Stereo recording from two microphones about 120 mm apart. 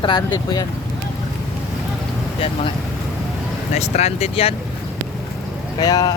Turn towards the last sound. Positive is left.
turn(degrees=35)  # may be behind; listen again after turning